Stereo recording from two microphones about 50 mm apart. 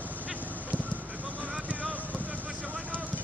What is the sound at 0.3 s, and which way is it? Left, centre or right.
Honk, right.